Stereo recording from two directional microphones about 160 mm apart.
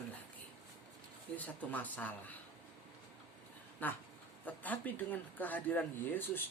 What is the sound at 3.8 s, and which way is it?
A woman's voice, 10° left (ahead or behind).